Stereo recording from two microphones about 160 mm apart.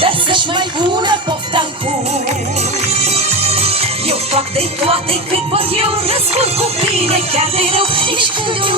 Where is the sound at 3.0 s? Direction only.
40° right (ahead or behind).